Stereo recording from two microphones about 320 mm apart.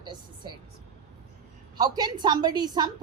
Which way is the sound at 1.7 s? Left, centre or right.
Centre.